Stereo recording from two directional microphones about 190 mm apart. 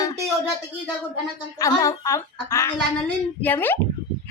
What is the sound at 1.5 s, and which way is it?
Female singing, 15° left (ahead or behind).